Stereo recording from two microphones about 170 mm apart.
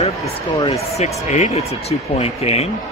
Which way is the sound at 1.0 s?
40° left (ahead or behind).